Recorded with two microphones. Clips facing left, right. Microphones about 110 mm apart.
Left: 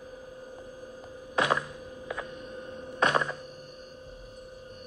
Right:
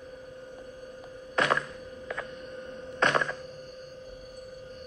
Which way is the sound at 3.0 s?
15° left (ahead or behind).